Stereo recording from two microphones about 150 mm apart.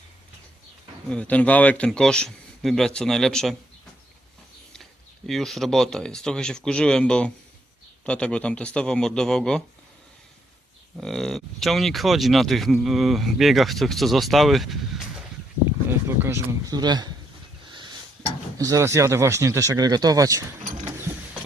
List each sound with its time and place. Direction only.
1.1 s speech: 10° left (ahead or behind)
4.7 s speech: centre (ahead or behind)
11.0 s speech: centre (ahead or behind)
15.9 s speech: 15° right (ahead or behind)
18.5 s speech: 25° right (ahead or behind)